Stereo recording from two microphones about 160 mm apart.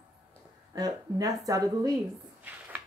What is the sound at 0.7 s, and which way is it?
Speech, 25° right (ahead or behind).